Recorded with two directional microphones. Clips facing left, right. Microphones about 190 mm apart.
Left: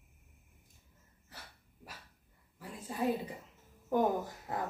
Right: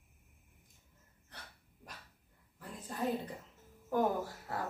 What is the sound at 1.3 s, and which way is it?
Breathing, 5° left (ahead or behind).